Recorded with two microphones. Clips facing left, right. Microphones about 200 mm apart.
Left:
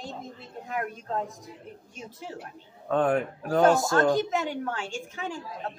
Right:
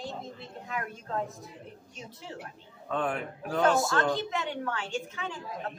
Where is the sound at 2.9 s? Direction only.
45° left (ahead or behind).